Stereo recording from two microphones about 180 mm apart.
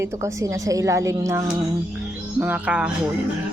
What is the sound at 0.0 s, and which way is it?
Speech, 15° right (ahead or behind).